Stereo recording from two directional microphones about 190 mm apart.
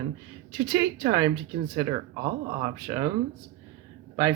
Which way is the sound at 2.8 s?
20° right (ahead or behind).